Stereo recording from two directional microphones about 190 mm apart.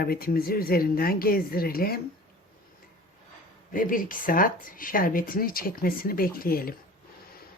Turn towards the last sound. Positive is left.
turn(degrees=50)  # may be behind; listen again after turning